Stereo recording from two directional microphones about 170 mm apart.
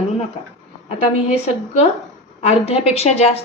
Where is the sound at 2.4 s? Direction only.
35° left (ahead or behind).